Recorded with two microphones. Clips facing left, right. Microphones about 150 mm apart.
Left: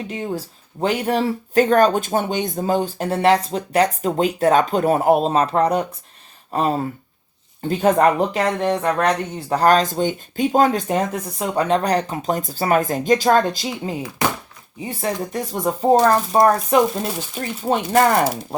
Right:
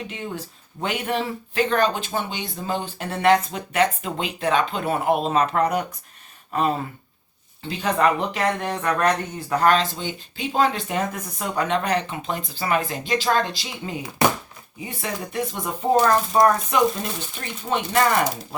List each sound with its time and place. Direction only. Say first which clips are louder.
0.1 s speech: left 6 dB; 35° left (ahead or behind)
7.6 s speech: left 6 dB; 45° left (ahead or behind)